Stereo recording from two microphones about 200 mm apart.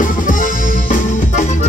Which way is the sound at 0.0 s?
40° left (ahead or behind).